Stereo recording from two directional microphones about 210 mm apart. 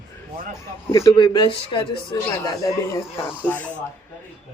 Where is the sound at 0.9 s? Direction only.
15° left (ahead or behind).